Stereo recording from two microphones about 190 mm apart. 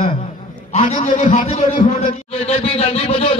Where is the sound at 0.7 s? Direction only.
35° left (ahead or behind).